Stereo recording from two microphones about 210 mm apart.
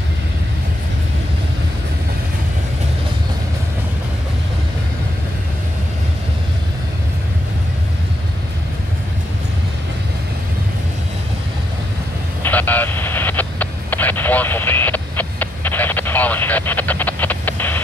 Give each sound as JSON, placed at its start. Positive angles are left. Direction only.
{"t": 12.4, "sound": "vehicle", "side_deg": 10}